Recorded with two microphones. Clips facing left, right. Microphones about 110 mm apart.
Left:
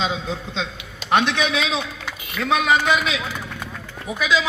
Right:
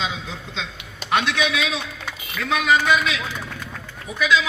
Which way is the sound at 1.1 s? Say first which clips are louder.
Left 2 dB; 15° left (ahead or behind).